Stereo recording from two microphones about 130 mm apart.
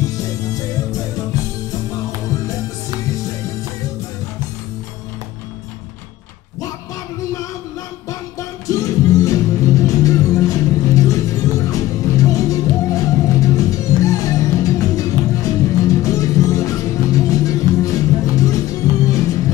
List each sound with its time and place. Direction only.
0.1 s music: 30° left (ahead or behind)
8.1 s music: 25° left (ahead or behind)